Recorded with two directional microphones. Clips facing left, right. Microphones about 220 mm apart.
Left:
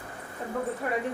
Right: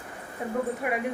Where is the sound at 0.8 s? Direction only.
10° right (ahead or behind).